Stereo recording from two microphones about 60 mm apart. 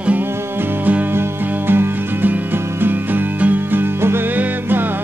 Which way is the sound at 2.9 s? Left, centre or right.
Right.